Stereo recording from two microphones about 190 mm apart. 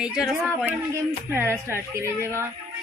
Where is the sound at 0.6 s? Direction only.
15° right (ahead or behind).